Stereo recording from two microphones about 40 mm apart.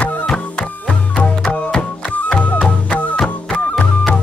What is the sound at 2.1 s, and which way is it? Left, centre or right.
Music, left.